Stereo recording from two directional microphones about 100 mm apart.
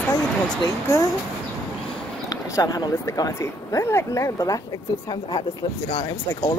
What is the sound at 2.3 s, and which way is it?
Speech, 40° left (ahead or behind).